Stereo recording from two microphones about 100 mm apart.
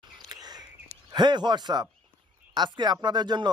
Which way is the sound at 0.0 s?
40° right (ahead or behind).